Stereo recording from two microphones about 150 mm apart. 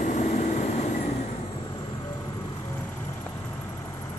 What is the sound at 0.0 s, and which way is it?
Vehicle, 50° left (ahead or behind).